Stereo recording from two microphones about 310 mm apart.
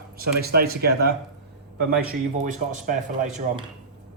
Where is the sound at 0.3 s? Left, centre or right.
Right.